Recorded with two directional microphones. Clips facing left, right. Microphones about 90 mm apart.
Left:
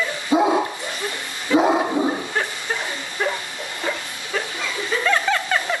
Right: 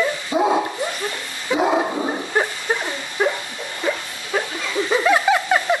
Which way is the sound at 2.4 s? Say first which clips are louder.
Right 4 dB; 15° right (ahead or behind).